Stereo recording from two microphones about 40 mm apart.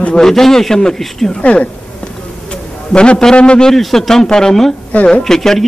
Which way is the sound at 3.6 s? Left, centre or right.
Centre.